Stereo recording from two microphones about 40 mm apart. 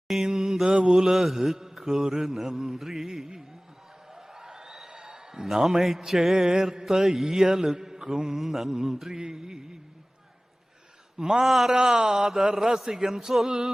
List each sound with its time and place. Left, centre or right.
0.1 s speech: centre
0.7 s a sound: right
0.9 s speech: centre
4.1 s a sound: centre
6.0 s speech: centre
11.2 s speech: centre
11.4 s a man's voice: centre
11.7 s speech: centre